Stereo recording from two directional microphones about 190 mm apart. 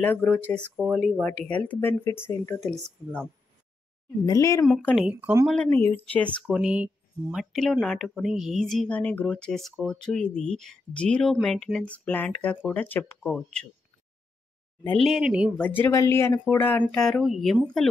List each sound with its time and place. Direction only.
0.0 s speech: 10° left (ahead or behind)
4.3 s speech: 15° left (ahead or behind)
4.6 s speech: centre (ahead or behind)
5.5 s speech: 10° left (ahead or behind)
6.4 s speech: 5° right (ahead or behind)
14.9 s speech: centre (ahead or behind)
15.6 s speech: 10° left (ahead or behind)